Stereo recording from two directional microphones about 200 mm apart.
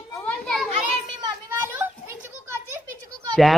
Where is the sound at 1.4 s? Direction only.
10° right (ahead or behind).